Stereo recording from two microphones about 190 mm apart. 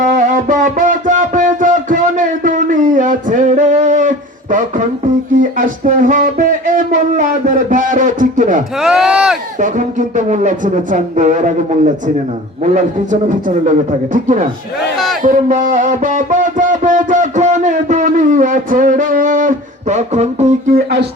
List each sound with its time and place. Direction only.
0.0 s music: 40° right (ahead or behind)
5.4 s speech: 45° right (ahead or behind)
8.8 s speech: 5° right (ahead or behind)
9.6 s speech: 45° right (ahead or behind)
12.7 s speech: 40° right (ahead or behind)
15.2 s a sound: 45° right (ahead or behind)